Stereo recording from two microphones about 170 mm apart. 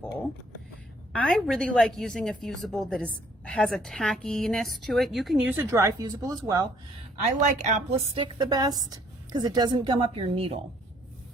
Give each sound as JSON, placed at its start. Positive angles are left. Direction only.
{"t": 1.1, "sound": "a woman's voice", "side_deg": 5}
{"t": 5.7, "sound": "a woman's voice", "side_deg": -20}
{"t": 7.2, "sound": "a woman's voice", "side_deg": -45}